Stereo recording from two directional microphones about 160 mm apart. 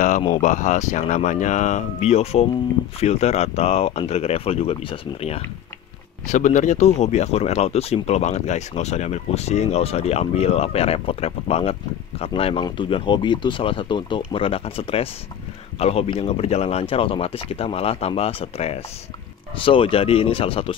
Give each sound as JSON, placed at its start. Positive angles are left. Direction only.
{"t": 0.4, "sound": "speech", "side_deg": 50}
{"t": 6.2, "sound": "speech", "side_deg": 50}